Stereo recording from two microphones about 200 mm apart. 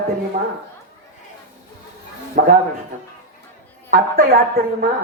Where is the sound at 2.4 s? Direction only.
50° right (ahead or behind).